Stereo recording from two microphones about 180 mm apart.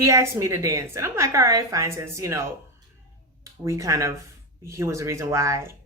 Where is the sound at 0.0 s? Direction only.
15° right (ahead or behind).